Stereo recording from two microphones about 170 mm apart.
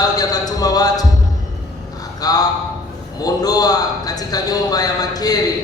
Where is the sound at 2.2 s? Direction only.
20° left (ahead or behind).